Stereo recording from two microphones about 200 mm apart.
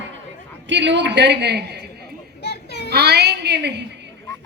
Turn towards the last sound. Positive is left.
turn(degrees=-55)  # may be behind; listen again after turning